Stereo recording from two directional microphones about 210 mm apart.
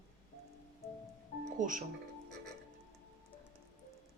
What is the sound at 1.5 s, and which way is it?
Speech, 40° right (ahead or behind).